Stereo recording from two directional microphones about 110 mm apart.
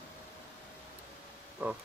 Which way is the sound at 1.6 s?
15° right (ahead or behind).